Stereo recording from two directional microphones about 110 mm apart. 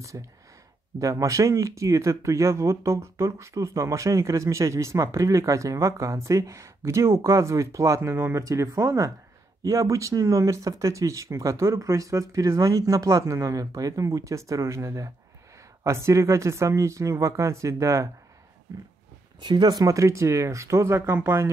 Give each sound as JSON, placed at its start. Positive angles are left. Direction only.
{"t": 0.1, "sound": "speech", "side_deg": -30}
{"t": 19.4, "sound": "speech", "side_deg": -40}